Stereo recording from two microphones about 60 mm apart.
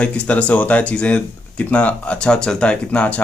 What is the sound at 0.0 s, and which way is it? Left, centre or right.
Speech, left.